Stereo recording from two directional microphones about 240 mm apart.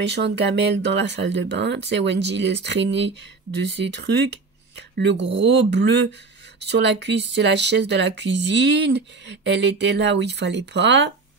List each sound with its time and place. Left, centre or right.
0.0 s speech: right